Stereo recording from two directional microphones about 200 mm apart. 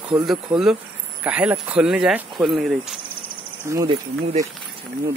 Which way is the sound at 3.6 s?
15° right (ahead or behind).